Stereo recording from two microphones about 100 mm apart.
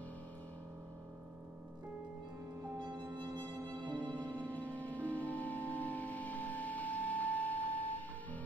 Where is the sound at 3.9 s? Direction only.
15° left (ahead or behind).